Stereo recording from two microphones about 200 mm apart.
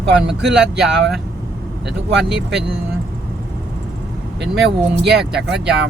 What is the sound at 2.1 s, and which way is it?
Speech, centre (ahead or behind).